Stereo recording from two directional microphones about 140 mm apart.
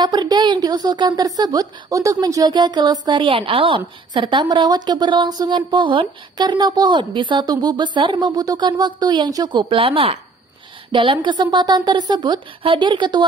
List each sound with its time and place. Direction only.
0.0 s a woman's voice: 30° right (ahead or behind)